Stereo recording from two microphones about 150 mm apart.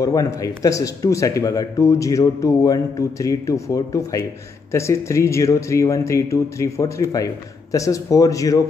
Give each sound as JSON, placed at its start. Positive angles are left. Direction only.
{"t": 0.0, "sound": "speech", "side_deg": 25}